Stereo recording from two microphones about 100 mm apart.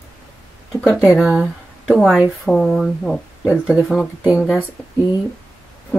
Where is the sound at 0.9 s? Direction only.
10° right (ahead or behind).